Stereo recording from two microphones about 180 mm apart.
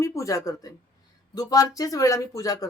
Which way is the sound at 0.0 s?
15° left (ahead or behind).